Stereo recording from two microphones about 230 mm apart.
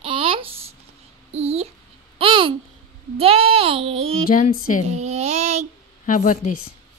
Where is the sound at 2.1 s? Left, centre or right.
Right.